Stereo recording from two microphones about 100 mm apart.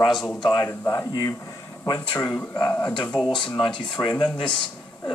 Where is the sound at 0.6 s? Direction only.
30° left (ahead or behind).